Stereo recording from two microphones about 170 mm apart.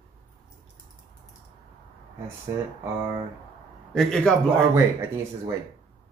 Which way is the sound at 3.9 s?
Centre (ahead or behind).